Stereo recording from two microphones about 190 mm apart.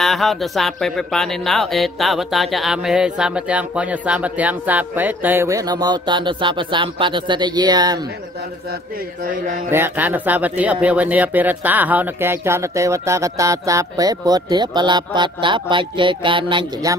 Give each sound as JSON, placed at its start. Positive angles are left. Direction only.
{"t": 0.0, "sound": "speech", "side_deg": 0}
{"t": 9.7, "sound": "speech", "side_deg": -10}